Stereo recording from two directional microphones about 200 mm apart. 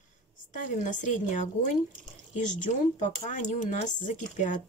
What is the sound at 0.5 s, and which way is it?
Speech, 40° left (ahead or behind).